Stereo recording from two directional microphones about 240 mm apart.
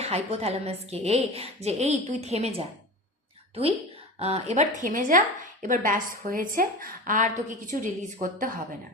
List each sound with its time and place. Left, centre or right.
0.0 s a woman's voice: right
4.2 s a woman's voice: right